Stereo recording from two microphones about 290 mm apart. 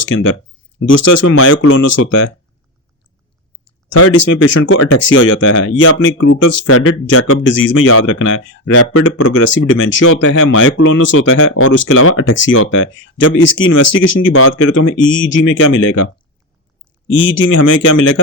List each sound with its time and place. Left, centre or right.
0.1 s speech: left
3.9 s speech: left
13.8 s speech: left
14.1 s speech: left
17.2 s speech: left
17.5 s speech: left